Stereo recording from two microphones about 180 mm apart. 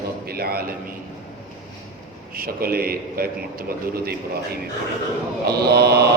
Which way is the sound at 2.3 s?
55° right (ahead or behind).